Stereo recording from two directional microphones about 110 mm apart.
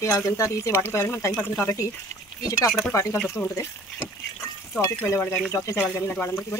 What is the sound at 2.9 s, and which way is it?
Speech, 25° left (ahead or behind).